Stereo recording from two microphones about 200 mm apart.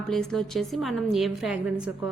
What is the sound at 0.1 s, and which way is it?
A woman's voice, centre (ahead or behind).